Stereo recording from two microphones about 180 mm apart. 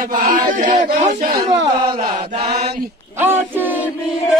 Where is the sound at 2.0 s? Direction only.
50° right (ahead or behind).